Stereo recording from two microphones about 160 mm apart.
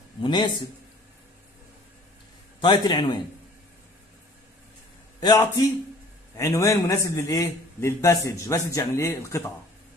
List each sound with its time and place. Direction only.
0.2 s a man's voice: 30° left (ahead or behind)
2.6 s a man's voice: 30° left (ahead or behind)
5.2 s a man's voice: 25° left (ahead or behind)